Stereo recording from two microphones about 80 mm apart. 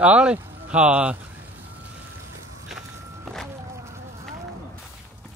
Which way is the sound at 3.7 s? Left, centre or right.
Right.